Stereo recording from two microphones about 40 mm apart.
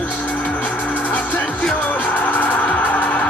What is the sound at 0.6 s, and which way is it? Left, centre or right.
Music, left.